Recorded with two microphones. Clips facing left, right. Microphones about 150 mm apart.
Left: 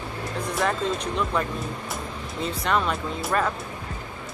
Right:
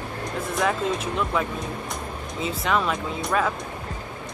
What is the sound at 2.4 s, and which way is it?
Speech, centre (ahead or behind).